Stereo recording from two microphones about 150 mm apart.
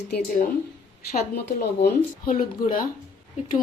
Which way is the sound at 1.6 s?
90° left.